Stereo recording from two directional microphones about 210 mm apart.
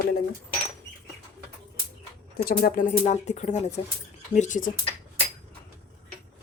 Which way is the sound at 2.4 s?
45° left (ahead or behind).